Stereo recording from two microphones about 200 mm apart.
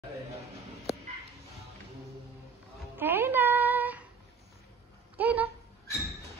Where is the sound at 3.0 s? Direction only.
10° right (ahead or behind).